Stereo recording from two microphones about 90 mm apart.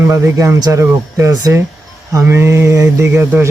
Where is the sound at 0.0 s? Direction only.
35° right (ahead or behind).